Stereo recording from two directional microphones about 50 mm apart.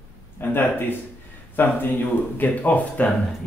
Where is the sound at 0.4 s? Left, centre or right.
Left.